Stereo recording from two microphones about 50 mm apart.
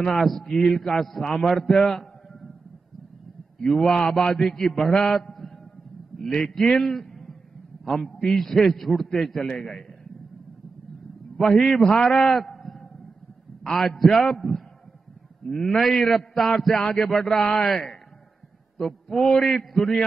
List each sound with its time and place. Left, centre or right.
0.2 s a man's voice: centre
3.5 s a man's voice: centre
6.8 s a sound: centre
7.8 s a man's voice: centre
11.3 s a man's voice: centre
13.7 s a man's voice: centre
17.4 s a man's voice: centre
17.6 s a man's voice: centre
18.8 s a sound: centre
19.3 s a man's voice: centre